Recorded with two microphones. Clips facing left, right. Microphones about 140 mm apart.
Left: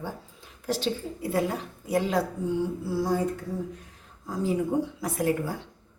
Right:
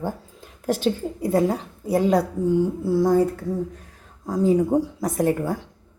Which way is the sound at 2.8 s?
50° right (ahead or behind).